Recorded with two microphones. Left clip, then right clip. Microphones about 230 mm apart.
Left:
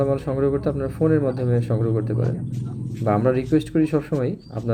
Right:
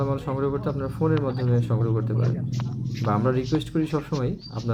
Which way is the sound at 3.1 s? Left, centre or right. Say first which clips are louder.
Left 5 dB; centre.